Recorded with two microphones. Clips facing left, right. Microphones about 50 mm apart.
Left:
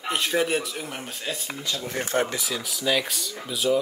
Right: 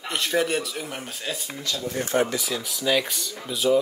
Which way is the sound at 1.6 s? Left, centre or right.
Left.